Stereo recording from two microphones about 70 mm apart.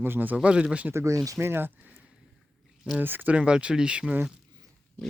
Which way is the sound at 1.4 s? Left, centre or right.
Right.